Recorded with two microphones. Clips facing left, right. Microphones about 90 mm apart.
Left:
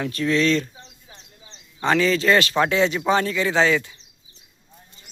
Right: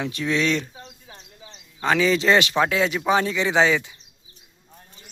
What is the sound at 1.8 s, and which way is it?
Speech, 5° right (ahead or behind).